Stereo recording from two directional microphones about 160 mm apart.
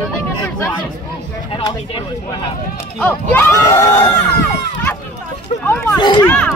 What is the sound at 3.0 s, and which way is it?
Speech, 10° left (ahead or behind).